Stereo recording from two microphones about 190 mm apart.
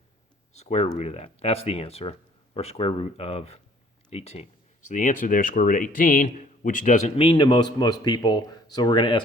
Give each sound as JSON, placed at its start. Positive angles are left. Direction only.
{"t": 0.5, "sound": "speech", "side_deg": 35}
{"t": 7.2, "sound": "a man's voice", "side_deg": 25}